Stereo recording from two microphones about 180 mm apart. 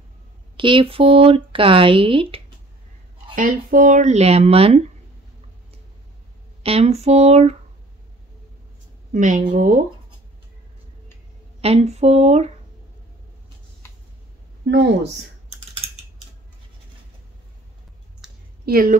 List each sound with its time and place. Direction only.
0.6 s speech: 30° right (ahead or behind)
3.3 s speech: 50° right (ahead or behind); by 4.8 s 35° right (ahead or behind)
6.6 s speech: 35° right (ahead or behind)
9.1 s a woman's voice: 45° right (ahead or behind)
11.6 s speech: 35° right (ahead or behind)
14.7 s speech: 75° right (ahead or behind)
18.2 s clicking: 5° right (ahead or behind)
18.7 s a woman's voice: 55° right (ahead or behind)